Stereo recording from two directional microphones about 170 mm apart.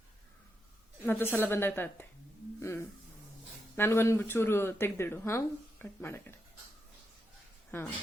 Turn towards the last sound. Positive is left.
turn(degrees=15)  # may be behind; listen again after turning